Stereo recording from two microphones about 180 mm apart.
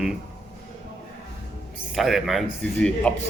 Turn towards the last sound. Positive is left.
turn(degrees=5)  # may be behind; listen again after turning